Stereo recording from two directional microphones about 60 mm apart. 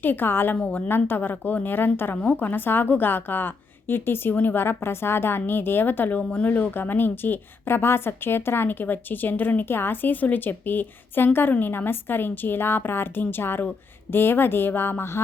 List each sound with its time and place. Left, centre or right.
0.0 s a woman's voice: left
0.5 s a woman's voice: left
0.9 s a woman's voice: left